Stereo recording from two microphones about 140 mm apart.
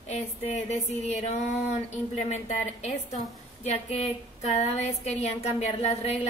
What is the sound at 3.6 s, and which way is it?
Speech, 50° left (ahead or behind).